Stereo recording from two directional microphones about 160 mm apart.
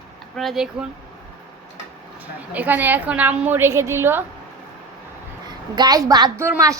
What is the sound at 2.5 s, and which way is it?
A woman's voice, 10° right (ahead or behind).